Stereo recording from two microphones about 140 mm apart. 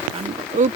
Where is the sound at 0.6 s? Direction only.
70° right (ahead or behind).